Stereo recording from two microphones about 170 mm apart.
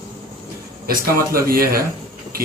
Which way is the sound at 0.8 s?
60° right (ahead or behind).